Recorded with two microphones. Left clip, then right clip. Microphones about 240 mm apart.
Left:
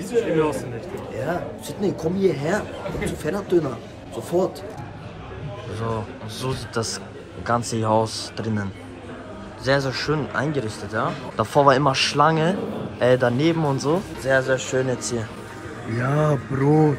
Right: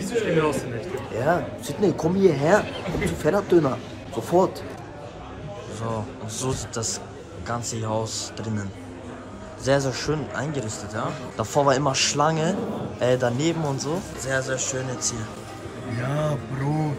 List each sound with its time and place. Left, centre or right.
0.0 s speech: centre
1.2 s speech: centre
5.8 s speech: centre
9.7 s speech: centre